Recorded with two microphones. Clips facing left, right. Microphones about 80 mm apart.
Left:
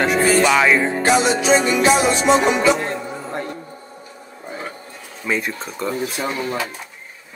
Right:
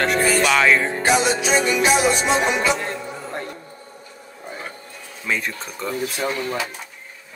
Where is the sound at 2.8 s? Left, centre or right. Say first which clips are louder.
Left 3 dB; left.